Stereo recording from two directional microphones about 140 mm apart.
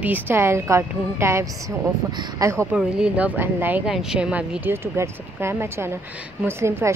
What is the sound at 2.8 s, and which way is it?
Speech, 5° right (ahead or behind).